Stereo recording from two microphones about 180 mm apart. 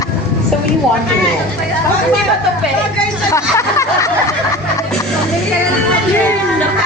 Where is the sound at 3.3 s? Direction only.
15° left (ahead or behind).